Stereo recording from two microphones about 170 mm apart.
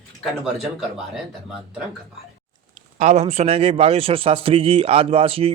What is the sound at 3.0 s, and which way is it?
A man's voice, 40° right (ahead or behind).